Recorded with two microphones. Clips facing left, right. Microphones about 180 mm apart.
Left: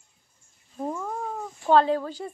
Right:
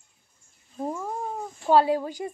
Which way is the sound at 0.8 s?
10° right (ahead or behind).